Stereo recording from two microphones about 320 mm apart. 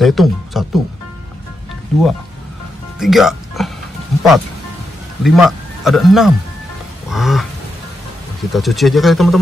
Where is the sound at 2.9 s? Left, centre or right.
Centre.